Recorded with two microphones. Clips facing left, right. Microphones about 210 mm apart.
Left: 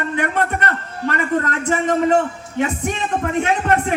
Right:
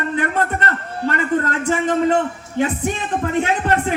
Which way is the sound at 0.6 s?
30° right (ahead or behind).